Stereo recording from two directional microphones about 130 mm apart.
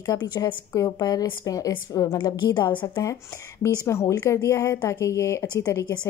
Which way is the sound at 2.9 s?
25° left (ahead or behind).